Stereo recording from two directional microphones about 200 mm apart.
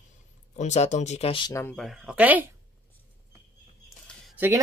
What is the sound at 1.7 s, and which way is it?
Speech, centre (ahead or behind).